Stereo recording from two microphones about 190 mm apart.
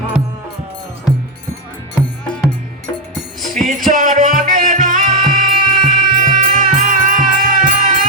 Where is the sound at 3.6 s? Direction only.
45° right (ahead or behind).